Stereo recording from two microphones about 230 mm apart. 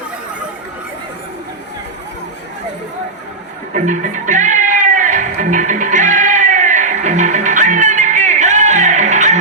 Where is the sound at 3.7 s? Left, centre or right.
Right.